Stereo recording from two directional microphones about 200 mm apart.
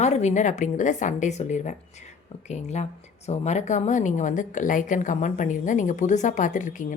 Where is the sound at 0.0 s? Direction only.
35° left (ahead or behind).